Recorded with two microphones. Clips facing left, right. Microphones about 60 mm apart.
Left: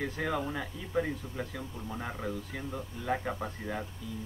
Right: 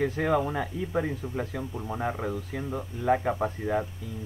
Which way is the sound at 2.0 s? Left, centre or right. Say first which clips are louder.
Right 6 dB; right.